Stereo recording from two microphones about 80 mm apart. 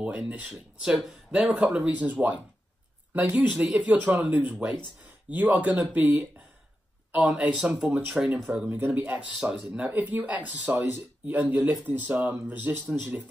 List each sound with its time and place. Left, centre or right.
0.0 s speech: centre